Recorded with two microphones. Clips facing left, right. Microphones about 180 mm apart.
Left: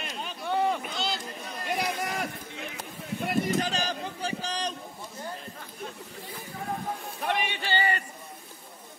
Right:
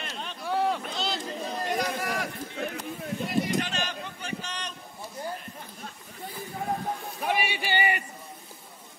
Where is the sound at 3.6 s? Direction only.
35° left (ahead or behind).